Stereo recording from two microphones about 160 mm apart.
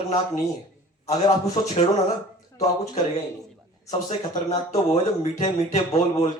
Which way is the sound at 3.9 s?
50° left (ahead or behind).